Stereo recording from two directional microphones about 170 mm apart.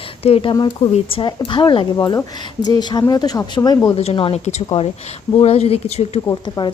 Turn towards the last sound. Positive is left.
turn(degrees=20)  # may be behind; listen again after turning